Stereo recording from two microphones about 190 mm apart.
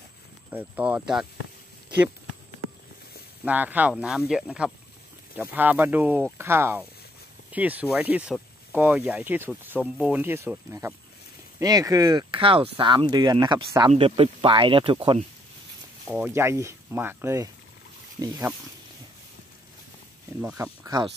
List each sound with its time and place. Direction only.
0.5 s speech: 5° right (ahead or behind)
3.4 s speech: 10° right (ahead or behind); by 15.0 s 25° right (ahead or behind)
16.1 s speech: 10° right (ahead or behind)
20.5 s speech: 15° right (ahead or behind)